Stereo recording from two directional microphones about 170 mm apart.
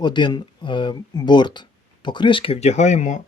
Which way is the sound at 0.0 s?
25° left (ahead or behind).